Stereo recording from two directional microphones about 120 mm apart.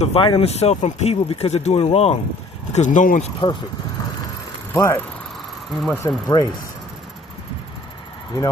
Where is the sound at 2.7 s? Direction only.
90° left.